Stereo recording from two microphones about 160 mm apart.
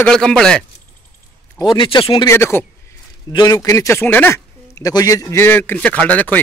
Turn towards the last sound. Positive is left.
turn(degrees=10)  # may be behind; listen again after turning